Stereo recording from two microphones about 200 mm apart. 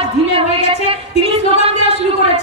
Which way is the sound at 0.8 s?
30° right (ahead or behind).